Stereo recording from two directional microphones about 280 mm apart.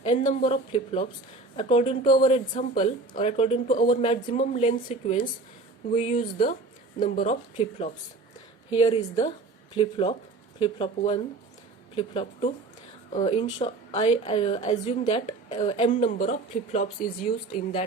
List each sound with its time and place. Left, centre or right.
0.0 s a woman's voice: left